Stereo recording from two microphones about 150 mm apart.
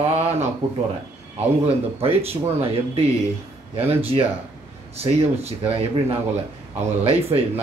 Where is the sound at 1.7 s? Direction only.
40° right (ahead or behind).